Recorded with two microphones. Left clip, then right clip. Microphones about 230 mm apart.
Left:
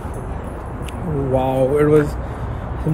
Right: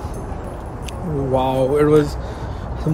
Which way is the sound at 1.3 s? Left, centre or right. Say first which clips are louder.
Even; centre.